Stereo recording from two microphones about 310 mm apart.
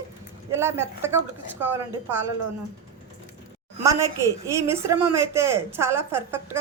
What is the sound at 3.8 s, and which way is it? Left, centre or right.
A woman's voice, centre.